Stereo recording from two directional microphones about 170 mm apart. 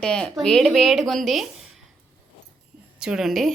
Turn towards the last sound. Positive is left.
turn(degrees=0)  # may be behind; listen again after turning